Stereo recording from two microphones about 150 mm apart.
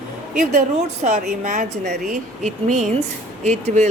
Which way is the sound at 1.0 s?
55° right (ahead or behind).